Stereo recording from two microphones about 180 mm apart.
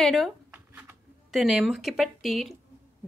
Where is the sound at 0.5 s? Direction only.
10° right (ahead or behind).